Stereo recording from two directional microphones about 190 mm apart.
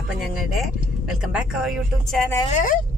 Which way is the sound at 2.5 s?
40° left (ahead or behind).